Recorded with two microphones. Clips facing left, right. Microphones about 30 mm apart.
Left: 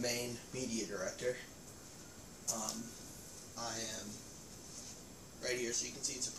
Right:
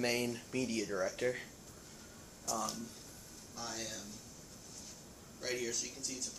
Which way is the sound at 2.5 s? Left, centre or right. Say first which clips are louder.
Right 4 dB; right.